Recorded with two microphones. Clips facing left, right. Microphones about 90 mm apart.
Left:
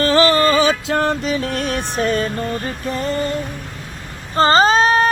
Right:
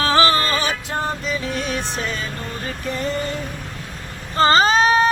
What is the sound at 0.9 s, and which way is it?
Music, 75° left (ahead or behind).